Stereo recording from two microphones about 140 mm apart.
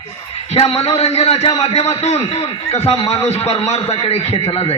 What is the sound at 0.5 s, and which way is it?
A man's voice, 45° left (ahead or behind).